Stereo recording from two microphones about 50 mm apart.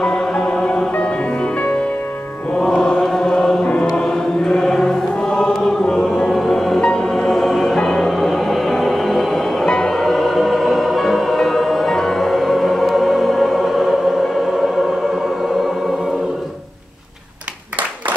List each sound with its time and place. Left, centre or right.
0.0 s music: centre
0.9 s music: left
2.6 s chant: centre
3.6 s choir: left
6.4 s music: centre